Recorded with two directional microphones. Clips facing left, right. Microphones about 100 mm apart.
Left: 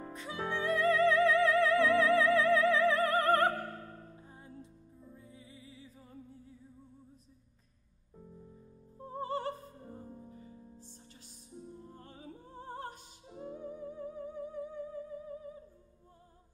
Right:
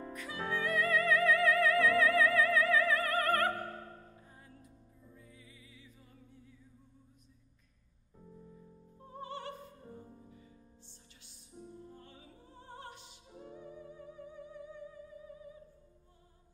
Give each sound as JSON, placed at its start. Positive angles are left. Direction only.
{"t": 0.1, "sound": "music", "side_deg": 25}
{"t": 9.0, "sound": "music", "side_deg": 35}